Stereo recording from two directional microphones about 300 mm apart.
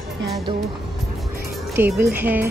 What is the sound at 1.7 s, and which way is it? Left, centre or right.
Speech, centre.